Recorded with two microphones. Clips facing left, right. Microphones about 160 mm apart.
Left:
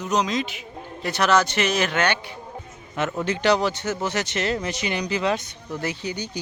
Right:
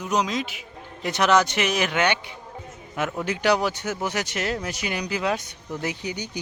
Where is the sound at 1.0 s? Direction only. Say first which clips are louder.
Even; 15° right (ahead or behind).